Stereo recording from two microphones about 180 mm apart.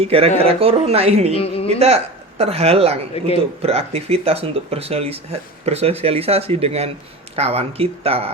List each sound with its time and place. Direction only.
0.0 s speech: 35° right (ahead or behind)
1.3 s a woman's voice: 30° left (ahead or behind)
2.4 s speech: 35° right (ahead or behind)